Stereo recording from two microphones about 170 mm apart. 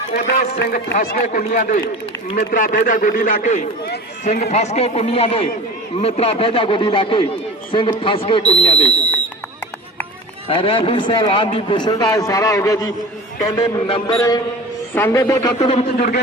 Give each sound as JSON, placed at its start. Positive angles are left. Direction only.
{"t": 0.1, "sound": "speech", "side_deg": 65}
{"t": 0.9, "sound": "a man's voice", "side_deg": 50}
{"t": 10.5, "sound": "a man's voice", "side_deg": 30}
{"t": 13.8, "sound": "speech", "side_deg": 30}
{"t": 14.2, "sound": "a man's voice", "side_deg": 20}
{"t": 15.5, "sound": "speech", "side_deg": 40}
{"t": 16.0, "sound": "a man's voice", "side_deg": 65}